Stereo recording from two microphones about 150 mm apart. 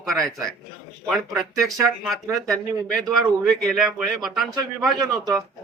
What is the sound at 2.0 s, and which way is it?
A man's voice, centre (ahead or behind).